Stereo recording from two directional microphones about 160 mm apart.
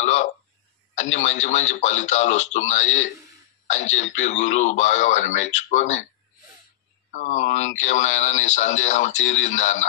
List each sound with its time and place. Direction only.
0.0 s a sound: 50° left (ahead or behind)
0.9 s speech: 45° left (ahead or behind)
7.1 s speech: 50° left (ahead or behind)